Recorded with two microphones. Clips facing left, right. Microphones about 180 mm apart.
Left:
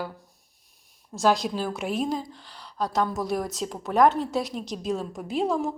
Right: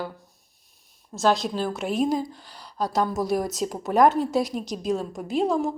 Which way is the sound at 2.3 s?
40° right (ahead or behind).